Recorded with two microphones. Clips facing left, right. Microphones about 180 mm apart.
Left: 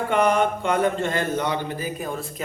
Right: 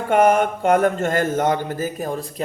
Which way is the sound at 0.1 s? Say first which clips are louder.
Right 5 dB; 45° right (ahead or behind).